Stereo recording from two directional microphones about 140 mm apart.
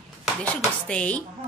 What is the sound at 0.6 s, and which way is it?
Speech, 10° left (ahead or behind).